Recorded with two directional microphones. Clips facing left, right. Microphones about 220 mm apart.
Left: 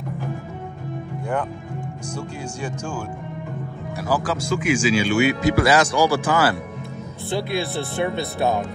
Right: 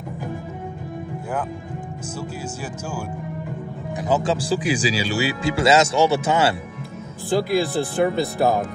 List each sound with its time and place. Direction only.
2.1 s speech: 5° right (ahead or behind)
3.9 s speech: 20° right (ahead or behind)
7.2 s speech: centre (ahead or behind)